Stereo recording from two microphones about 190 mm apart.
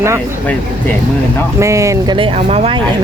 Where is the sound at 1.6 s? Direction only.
15° right (ahead or behind).